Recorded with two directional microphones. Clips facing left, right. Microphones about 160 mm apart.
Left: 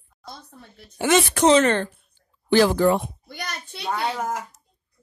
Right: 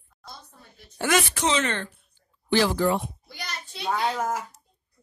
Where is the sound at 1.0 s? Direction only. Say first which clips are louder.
Left 4 dB; 25° left (ahead or behind).